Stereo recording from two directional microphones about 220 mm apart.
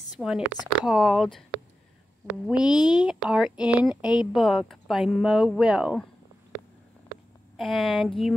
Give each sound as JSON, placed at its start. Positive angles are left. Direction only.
{"t": 0.5, "sound": "speech", "side_deg": 0}
{"t": 2.8, "sound": "speech", "side_deg": 20}
{"t": 3.1, "sound": "speech", "side_deg": -5}
{"t": 7.5, "sound": "speech", "side_deg": 0}